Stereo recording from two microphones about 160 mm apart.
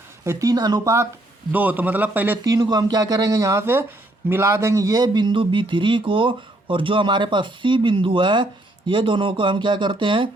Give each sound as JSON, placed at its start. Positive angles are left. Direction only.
{"t": 0.3, "sound": "speech", "side_deg": -20}
{"t": 1.5, "sound": "a man's voice", "side_deg": -10}
{"t": 2.4, "sound": "speech", "side_deg": -25}